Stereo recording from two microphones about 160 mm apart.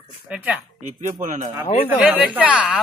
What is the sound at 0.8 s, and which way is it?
Speech, 50° right (ahead or behind).